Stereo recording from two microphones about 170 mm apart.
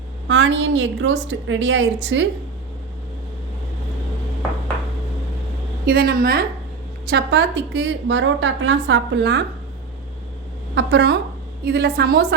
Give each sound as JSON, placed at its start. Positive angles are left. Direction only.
{"t": 0.3, "sound": "a woman's voice", "side_deg": -90}
{"t": 5.8, "sound": "a woman's voice", "side_deg": -65}
{"t": 7.1, "sound": "a woman's voice", "side_deg": -90}
{"t": 10.8, "sound": "a woman's voice", "side_deg": -80}